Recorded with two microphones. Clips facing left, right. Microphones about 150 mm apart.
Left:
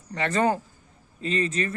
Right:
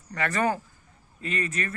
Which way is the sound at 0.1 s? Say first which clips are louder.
Left 3 dB; 25° left (ahead or behind).